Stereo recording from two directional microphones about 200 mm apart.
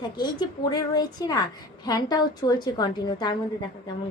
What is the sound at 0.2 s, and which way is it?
Speech, 20° left (ahead or behind).